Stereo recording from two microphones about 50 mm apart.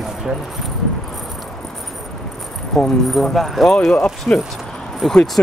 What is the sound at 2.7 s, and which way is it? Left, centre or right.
Speech, centre.